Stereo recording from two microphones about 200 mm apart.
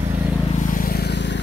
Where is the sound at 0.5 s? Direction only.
45° left (ahead or behind).